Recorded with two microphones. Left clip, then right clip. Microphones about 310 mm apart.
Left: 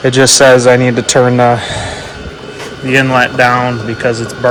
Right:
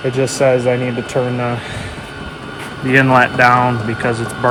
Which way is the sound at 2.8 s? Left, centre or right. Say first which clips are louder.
Left 1 dB; centre.